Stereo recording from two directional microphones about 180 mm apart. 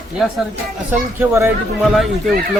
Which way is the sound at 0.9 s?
15° right (ahead or behind).